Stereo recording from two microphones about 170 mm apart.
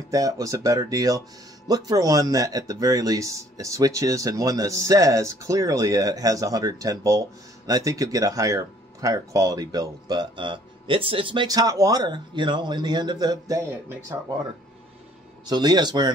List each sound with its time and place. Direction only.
0.1 s speech: 20° right (ahead or behind)
13.7 s speech: 15° right (ahead or behind)
15.4 s speech: 25° right (ahead or behind)